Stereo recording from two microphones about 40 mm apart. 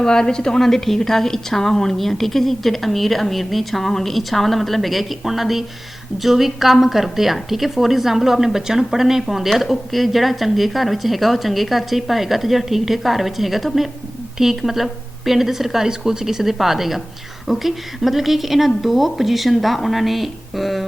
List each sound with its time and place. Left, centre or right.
0.0 s a woman's voice: centre